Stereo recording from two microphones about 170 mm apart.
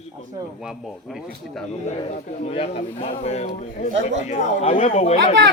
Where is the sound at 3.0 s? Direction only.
40° left (ahead or behind).